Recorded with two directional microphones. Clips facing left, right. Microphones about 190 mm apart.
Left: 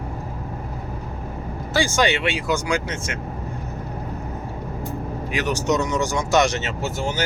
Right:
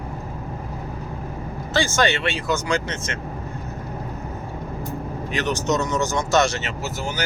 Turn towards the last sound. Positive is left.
turn(degrees=25)  # may be behind; listen again after turning